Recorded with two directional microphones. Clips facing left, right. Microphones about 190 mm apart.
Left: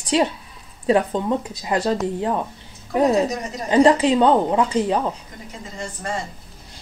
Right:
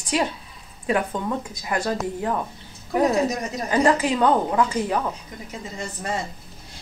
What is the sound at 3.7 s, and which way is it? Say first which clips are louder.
Speech: left 5 dB; 25° left (ahead or behind).